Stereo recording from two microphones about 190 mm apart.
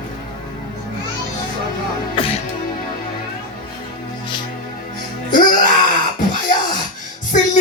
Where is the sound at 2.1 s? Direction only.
30° left (ahead or behind).